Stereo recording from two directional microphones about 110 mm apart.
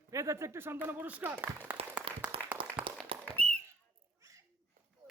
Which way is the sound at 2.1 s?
55° right (ahead or behind).